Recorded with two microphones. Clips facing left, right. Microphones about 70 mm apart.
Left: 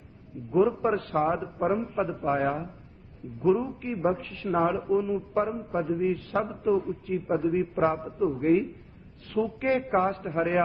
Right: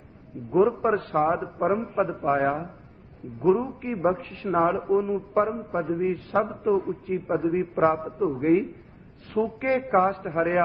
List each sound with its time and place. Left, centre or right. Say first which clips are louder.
0.3 s a man's voice: right 2 dB; right